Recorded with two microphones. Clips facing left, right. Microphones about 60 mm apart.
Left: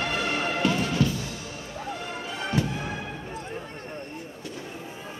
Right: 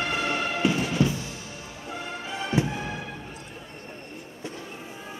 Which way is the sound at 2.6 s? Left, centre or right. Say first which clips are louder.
Right 2 dB; centre.